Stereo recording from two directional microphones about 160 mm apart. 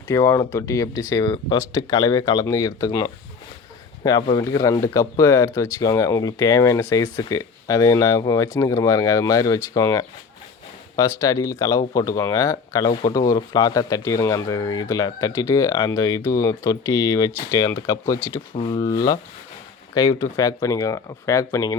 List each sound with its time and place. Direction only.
0.1 s speech: 20° left (ahead or behind)
18.5 s speech: 30° left (ahead or behind)